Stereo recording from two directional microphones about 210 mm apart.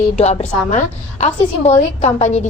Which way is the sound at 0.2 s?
30° left (ahead or behind).